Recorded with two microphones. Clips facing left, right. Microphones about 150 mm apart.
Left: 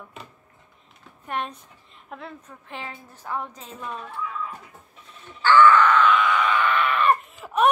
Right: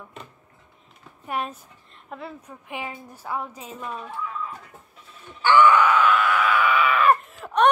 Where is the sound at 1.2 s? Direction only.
5° right (ahead or behind).